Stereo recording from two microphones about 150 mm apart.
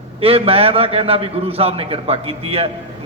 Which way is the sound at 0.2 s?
40° right (ahead or behind).